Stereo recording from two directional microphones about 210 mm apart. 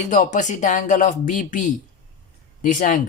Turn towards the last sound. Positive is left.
turn(degrees=40)  # may be behind; listen again after turning